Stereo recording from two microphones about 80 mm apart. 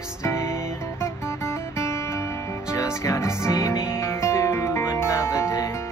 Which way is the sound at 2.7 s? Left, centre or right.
Left.